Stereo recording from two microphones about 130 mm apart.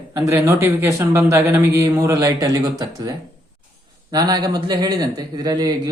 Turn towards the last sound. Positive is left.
turn(degrees=-30)  # may be behind; listen again after turning